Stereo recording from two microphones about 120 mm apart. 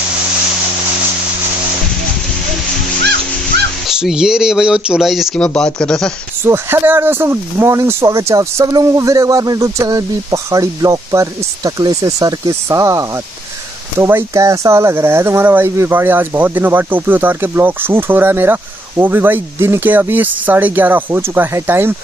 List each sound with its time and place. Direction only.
3.8 s speech: 5° right (ahead or behind)
6.4 s speech: 20° right (ahead or behind)